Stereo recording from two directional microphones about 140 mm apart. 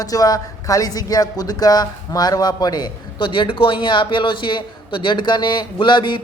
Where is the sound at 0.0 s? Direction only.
25° left (ahead or behind).